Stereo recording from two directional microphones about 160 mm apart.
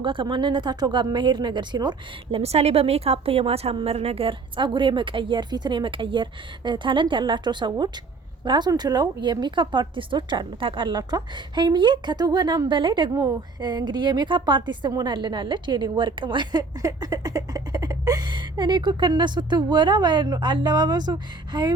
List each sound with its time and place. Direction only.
0.0 s a woman's voice: 30° right (ahead or behind)
2.4 s a woman's voice: 40° right (ahead or behind)